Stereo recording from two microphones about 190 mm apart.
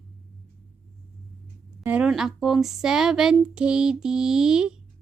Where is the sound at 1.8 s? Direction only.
5° right (ahead or behind).